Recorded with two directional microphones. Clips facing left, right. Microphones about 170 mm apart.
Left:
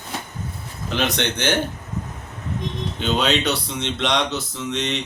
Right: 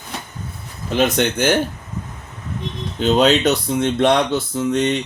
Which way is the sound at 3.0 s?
40° right (ahead or behind).